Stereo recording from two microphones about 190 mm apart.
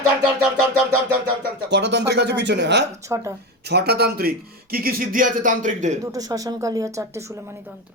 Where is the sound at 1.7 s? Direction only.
65° right (ahead or behind).